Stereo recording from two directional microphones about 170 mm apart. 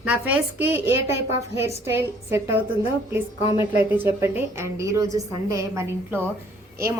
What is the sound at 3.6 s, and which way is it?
A woman's voice, 15° right (ahead or behind).